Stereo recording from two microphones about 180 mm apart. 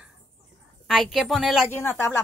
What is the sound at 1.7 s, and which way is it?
Speech, 15° left (ahead or behind).